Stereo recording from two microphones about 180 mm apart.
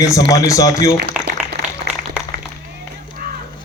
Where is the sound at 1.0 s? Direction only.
60° right (ahead or behind).